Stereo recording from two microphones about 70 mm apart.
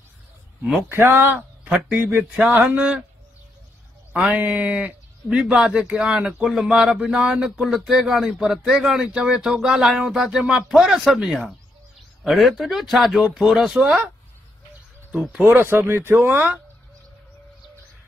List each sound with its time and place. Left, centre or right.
0.8 s speech: right; by 3.0 s centre
4.3 s a man's voice: right
15.3 s speech: right